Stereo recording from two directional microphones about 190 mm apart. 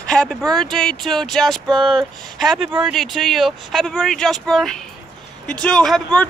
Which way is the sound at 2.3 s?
Centre (ahead or behind).